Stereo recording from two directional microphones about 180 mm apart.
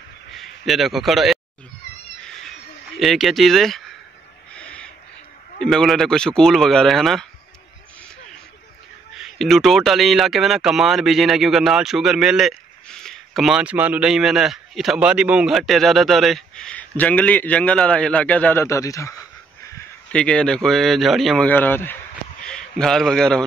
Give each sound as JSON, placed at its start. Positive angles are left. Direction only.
{"t": 0.3, "sound": "a man's voice", "side_deg": 0}
{"t": 3.0, "sound": "speech", "side_deg": 0}
{"t": 4.6, "sound": "owl", "side_deg": 5}
{"t": 5.6, "sound": "speech", "side_deg": 5}
{"t": 9.1, "sound": "speech", "side_deg": 0}
{"t": 20.1, "sound": "a man's voice", "side_deg": 5}